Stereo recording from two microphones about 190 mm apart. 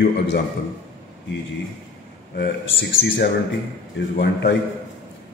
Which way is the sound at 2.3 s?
60° left (ahead or behind).